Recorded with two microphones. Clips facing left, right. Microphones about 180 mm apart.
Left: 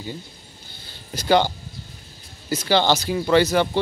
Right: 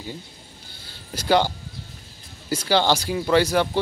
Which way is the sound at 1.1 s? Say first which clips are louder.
Left 1 dB; 5° right (ahead or behind).